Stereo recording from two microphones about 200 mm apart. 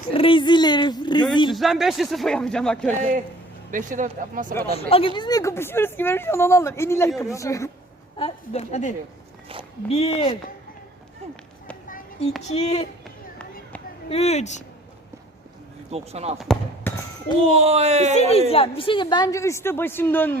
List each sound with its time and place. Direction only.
0.1 s speech: 25° left (ahead or behind)
1.5 s speech: centre (ahead or behind)
3.0 s speech: 40° right (ahead or behind)
4.7 s speech: 30° left (ahead or behind)
8.2 s speech: 35° left (ahead or behind)
9.9 s speech: 30° left (ahead or behind)
11.9 s a sound: 40° left (ahead or behind)
12.5 s speech: 30° left (ahead or behind)
14.1 s speech: 30° left (ahead or behind)
15.9 s speech: 30° right (ahead or behind)
16.4 s speech: 5° left (ahead or behind)
17.5 s speech: 30° right (ahead or behind)
18.1 s speech: 35° left (ahead or behind); by 20.4 s 10° left (ahead or behind)